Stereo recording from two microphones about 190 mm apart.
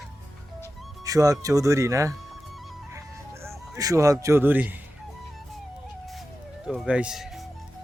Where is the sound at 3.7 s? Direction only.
15° right (ahead or behind).